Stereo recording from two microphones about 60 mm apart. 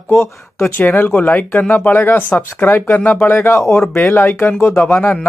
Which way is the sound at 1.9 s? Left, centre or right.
Left.